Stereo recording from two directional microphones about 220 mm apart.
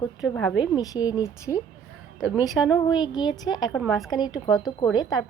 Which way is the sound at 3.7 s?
Centre (ahead or behind).